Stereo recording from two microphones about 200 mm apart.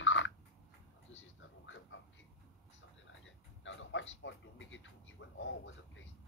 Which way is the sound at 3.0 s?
65° left (ahead or behind).